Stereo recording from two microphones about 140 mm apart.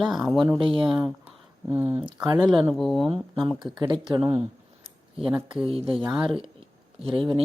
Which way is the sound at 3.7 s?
30° right (ahead or behind).